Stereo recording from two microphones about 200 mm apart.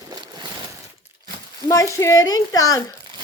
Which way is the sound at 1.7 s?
15° left (ahead or behind).